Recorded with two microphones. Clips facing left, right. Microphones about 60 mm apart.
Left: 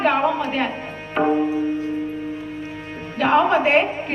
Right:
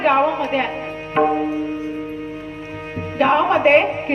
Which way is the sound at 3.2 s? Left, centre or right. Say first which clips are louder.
Right 2 dB; right.